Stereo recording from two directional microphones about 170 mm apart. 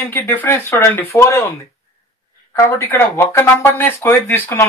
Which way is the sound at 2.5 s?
15° left (ahead or behind).